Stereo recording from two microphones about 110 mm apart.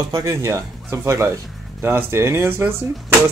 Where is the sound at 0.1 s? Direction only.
30° right (ahead or behind).